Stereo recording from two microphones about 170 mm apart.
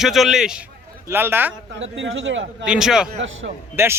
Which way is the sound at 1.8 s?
90° right.